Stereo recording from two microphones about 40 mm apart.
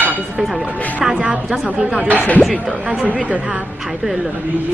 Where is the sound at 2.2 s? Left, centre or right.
Left.